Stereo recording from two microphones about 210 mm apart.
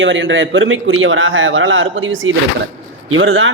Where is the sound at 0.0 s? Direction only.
60° right (ahead or behind).